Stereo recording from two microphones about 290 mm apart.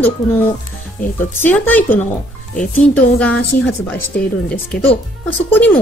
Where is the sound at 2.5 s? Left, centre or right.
Left.